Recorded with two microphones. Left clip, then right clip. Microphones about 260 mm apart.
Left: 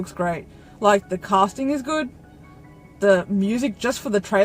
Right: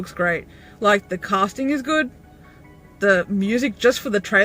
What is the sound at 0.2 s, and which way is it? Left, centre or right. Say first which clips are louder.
Speech: right 4 dB; left.